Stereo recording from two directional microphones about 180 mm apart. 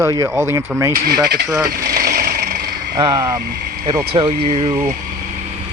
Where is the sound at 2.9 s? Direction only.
20° right (ahead or behind).